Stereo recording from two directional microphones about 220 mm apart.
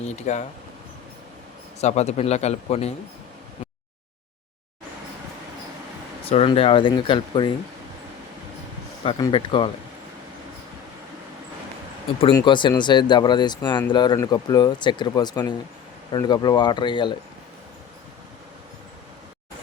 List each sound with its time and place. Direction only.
0.0 s speech: 30° left (ahead or behind)
1.8 s speech: 30° left (ahead or behind)
6.2 s speech: 25° left (ahead or behind)
9.0 s speech: 20° left (ahead or behind)
12.2 s speech: 20° left (ahead or behind)